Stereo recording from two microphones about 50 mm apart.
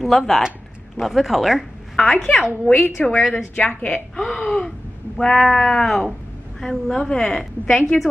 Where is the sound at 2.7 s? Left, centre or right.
Left.